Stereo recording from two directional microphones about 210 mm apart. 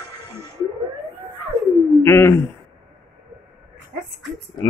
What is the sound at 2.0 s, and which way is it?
Speech, 10° left (ahead or behind).